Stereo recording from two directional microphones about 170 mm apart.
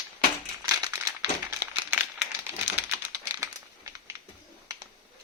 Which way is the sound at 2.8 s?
15° right (ahead or behind).